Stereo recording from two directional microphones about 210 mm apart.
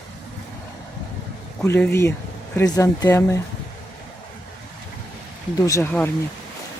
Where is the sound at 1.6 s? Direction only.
10° left (ahead or behind).